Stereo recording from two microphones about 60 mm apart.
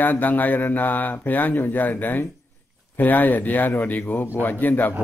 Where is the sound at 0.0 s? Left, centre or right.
Left.